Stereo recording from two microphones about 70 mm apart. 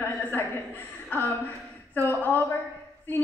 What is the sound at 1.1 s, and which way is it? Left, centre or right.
Speech, left.